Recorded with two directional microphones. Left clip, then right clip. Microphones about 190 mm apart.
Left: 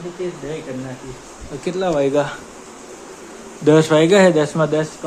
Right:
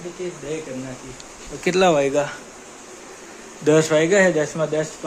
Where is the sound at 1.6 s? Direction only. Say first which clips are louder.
Right 4 dB; 35° right (ahead or behind).